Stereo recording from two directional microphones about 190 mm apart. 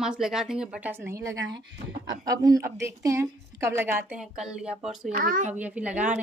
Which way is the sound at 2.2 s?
20° right (ahead or behind).